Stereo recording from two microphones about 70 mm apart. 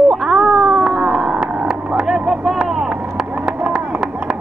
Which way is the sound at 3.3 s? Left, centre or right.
Right.